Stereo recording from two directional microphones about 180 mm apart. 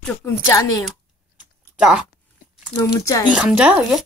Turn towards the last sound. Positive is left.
turn(degrees=-5)  # may be behind; listen again after turning